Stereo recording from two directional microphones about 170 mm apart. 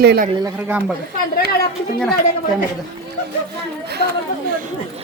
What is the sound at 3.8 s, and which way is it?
Chatter, 75° right (ahead or behind).